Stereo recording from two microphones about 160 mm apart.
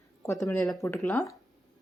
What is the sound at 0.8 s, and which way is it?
Speech, 15° left (ahead or behind).